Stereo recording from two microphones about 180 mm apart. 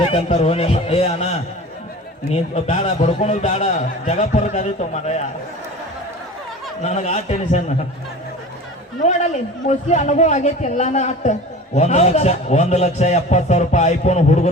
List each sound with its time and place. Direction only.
0.0 s a man's voice: 35° left (ahead or behind)
6.8 s a man's voice: 40° left (ahead or behind)
9.0 s a man's voice: 40° left (ahead or behind)